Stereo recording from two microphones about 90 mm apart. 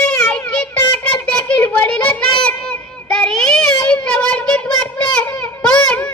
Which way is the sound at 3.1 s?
10° left (ahead or behind).